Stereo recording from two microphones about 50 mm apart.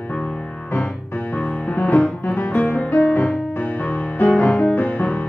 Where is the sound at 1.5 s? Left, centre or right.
Left.